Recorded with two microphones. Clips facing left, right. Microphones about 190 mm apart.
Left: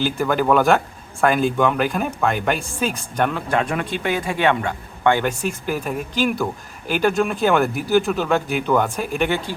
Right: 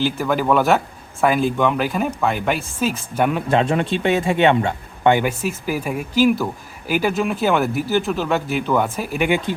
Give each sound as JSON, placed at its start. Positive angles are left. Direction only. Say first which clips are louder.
{"t": 0.0, "sound": "speech", "louder": "even", "side_deg": 0}
{"t": 3.3, "sound": "a man's voice", "louder": "right 4 dB", "side_deg": -20}
{"t": 5.2, "sound": "speech", "louder": "right 1 dB", "side_deg": -5}